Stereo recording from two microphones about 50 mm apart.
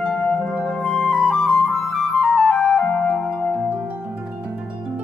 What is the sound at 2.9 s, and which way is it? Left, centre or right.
Music, left.